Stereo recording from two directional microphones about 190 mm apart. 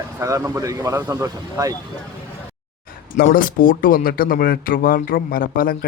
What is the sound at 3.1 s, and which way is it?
Speech, 50° left (ahead or behind).